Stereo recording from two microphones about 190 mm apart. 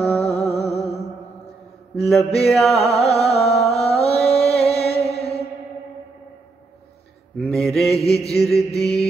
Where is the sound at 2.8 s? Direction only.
35° left (ahead or behind).